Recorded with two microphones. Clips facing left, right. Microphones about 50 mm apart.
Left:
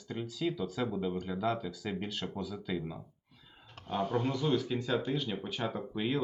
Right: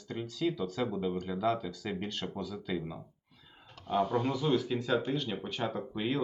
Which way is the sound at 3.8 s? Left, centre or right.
Left.